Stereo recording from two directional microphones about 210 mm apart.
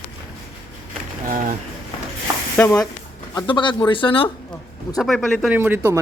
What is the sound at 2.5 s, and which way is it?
Speech, 10° left (ahead or behind).